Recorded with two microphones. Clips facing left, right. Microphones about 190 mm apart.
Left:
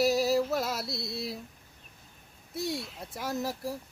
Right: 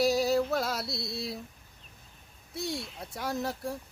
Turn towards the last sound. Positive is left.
turn(degrees=0)  # may be behind; listen again after turning